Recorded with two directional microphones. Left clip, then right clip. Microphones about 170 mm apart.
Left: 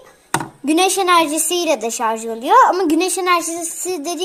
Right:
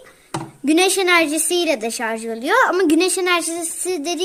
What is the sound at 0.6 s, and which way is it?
A woman's voice, 30° right (ahead or behind).